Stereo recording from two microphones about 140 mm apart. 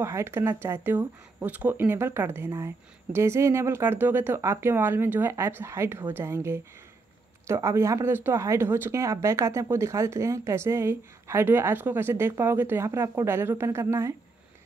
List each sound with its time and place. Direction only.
0.0 s speech: 20° right (ahead or behind)